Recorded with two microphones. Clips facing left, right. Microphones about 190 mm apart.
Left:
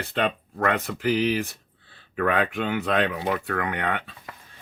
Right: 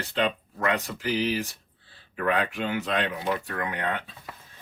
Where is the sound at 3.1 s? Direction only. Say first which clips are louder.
Left 3 dB; 65° left (ahead or behind).